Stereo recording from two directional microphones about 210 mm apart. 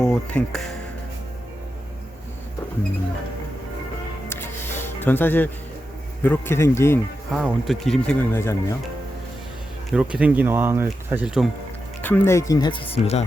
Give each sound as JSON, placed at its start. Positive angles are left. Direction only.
{"t": 0.0, "sound": "speech", "side_deg": 5}
{"t": 4.3, "sound": "music", "side_deg": 10}
{"t": 6.2, "sound": "speech", "side_deg": 10}
{"t": 7.3, "sound": "speech", "side_deg": 0}
{"t": 9.9, "sound": "speech", "side_deg": -5}
{"t": 12.0, "sound": "speech", "side_deg": 10}